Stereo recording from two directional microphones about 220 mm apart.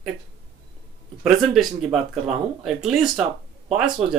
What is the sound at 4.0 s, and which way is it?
Speech, 30° right (ahead or behind).